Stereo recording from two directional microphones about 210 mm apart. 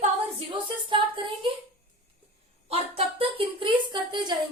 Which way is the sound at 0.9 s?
25° right (ahead or behind).